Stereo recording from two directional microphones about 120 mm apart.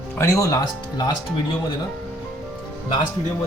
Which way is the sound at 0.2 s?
25° left (ahead or behind).